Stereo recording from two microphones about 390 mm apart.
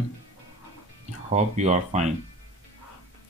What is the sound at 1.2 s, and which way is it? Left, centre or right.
Speech, centre.